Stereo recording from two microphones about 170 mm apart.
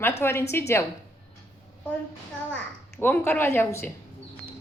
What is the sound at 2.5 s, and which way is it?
A child's voice, 10° left (ahead or behind).